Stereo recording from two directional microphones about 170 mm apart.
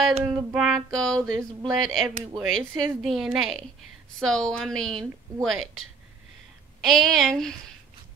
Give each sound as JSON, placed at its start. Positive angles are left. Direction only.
{"t": 0.3, "sound": "a sound", "side_deg": 0}
{"t": 1.1, "sound": "speech", "side_deg": -20}
{"t": 1.7, "sound": "a woman's voice", "side_deg": 0}
{"t": 6.8, "sound": "a woman's voice", "side_deg": 0}